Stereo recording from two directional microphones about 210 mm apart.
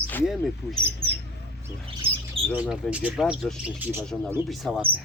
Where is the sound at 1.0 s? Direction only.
25° right (ahead or behind).